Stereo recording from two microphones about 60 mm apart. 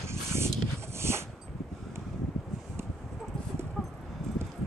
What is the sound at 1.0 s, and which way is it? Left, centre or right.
Dog, right.